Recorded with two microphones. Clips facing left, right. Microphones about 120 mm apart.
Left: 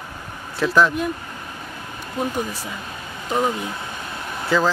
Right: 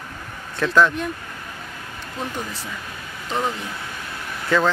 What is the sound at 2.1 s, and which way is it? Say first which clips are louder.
Speech: left 5 dB; 10° left (ahead or behind).